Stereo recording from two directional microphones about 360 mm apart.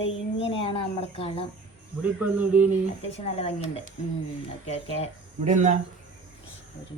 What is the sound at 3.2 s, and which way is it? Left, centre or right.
Speech, centre.